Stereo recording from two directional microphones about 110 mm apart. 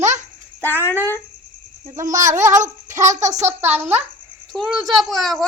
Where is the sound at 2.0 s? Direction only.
30° right (ahead or behind).